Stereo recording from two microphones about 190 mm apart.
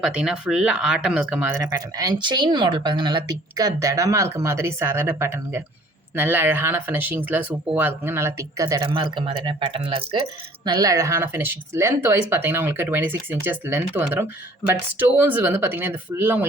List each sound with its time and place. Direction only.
0.0 s speech: 5° right (ahead or behind); by 10.0 s 30° right (ahead or behind)
10.7 s speech: 20° right (ahead or behind)